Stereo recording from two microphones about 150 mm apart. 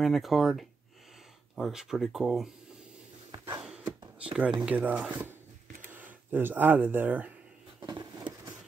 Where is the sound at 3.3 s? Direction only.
25° right (ahead or behind).